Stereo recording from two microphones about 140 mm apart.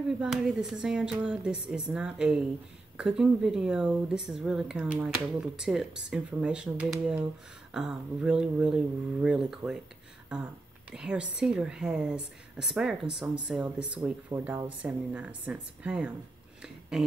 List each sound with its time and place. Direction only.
0.2 s speech: 5° right (ahead or behind)
10.9 s a woman's voice: 5° right (ahead or behind)